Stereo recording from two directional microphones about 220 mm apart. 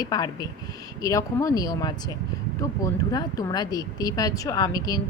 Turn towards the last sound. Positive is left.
turn(degrees=15)  # may be behind; listen again after turning